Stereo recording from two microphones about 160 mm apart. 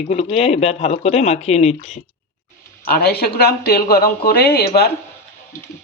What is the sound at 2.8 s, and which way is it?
Speech, 75° left (ahead or behind).